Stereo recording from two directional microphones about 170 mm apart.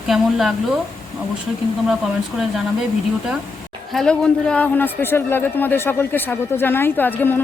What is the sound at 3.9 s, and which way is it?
A man's voice, 5° left (ahead or behind).